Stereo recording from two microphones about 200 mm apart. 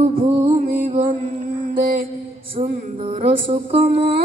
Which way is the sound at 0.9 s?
25° right (ahead or behind).